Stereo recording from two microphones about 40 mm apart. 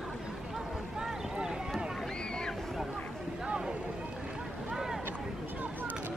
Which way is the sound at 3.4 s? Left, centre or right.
Right.